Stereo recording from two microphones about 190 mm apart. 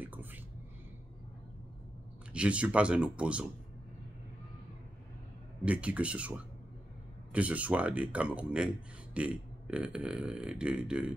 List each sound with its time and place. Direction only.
0.0 s whispering: 10° right (ahead or behind)
2.3 s speech: 5° right (ahead or behind)
5.7 s speech: 5° right (ahead or behind)